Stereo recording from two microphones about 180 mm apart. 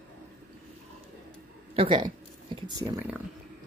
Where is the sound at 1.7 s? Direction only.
25° right (ahead or behind).